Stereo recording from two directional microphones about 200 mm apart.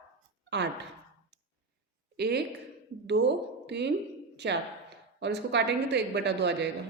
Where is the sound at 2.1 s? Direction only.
55° right (ahead or behind).